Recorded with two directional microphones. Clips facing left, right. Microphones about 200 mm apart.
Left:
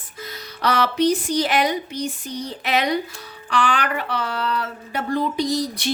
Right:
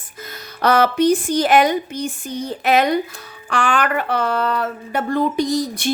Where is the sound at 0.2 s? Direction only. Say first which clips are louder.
Right 4 dB; 50° right (ahead or behind).